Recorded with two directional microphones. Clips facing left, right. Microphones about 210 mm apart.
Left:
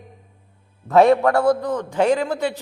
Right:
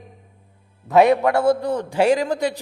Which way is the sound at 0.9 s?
20° right (ahead or behind).